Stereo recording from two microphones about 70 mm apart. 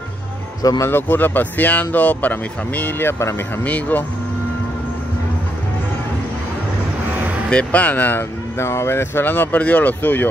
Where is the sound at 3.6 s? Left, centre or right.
Left.